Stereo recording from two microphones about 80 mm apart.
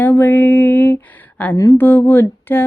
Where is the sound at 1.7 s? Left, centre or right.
Left.